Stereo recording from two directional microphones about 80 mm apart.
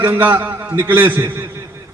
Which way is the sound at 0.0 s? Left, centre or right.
Right.